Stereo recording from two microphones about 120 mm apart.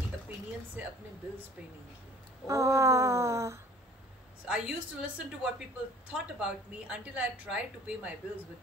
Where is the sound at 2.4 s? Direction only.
25° right (ahead or behind).